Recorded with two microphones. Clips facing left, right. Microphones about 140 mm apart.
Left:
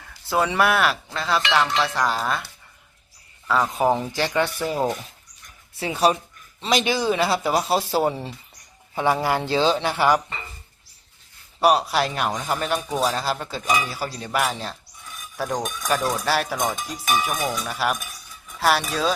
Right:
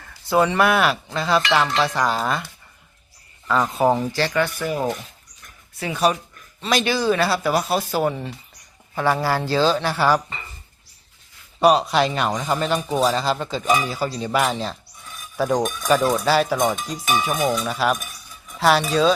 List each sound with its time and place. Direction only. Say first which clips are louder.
0.0 s speech: right 4 dB; 5° left (ahead or behind)
3.4 s speech: right 2 dB; 5° left (ahead or behind)
4.1 s speech: right 1 dB; 15° left (ahead or behind)
4.4 s speech: even; 30° left (ahead or behind)
9.0 s speech: right 1 dB; 15° left (ahead or behind)
11.6 s speech: right 3 dB; 5° left (ahead or behind)
17.2 s cowbell: right 5 dB; 10° right (ahead or behind)
17.7 s speech: right 3 dB; 5° left (ahead or behind)